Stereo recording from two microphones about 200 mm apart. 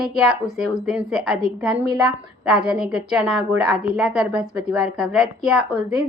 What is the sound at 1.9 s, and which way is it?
A woman's voice, 5° right (ahead or behind).